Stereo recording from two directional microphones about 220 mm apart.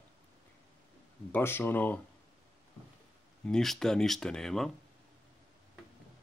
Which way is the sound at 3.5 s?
Centre (ahead or behind).